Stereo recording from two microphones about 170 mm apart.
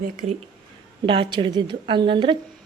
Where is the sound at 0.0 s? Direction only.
50° right (ahead or behind).